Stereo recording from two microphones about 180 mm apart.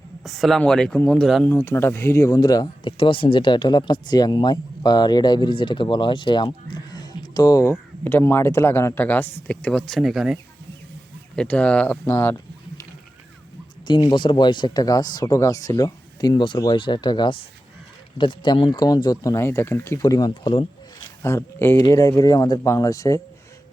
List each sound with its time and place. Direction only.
0.3 s speech: centre (ahead or behind)
1.5 s speech: 10° left (ahead or behind)
11.3 s speech: 5° left (ahead or behind)
13.8 s speech: 25° left (ahead or behind)
21.2 s speech: 15° left (ahead or behind)